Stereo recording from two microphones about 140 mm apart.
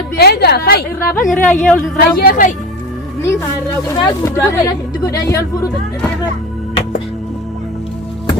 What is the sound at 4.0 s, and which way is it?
Speech, 30° left (ahead or behind).